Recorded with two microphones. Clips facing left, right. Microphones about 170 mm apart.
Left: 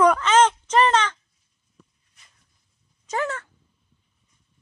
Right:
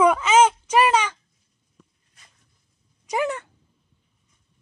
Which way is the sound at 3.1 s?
15° right (ahead or behind).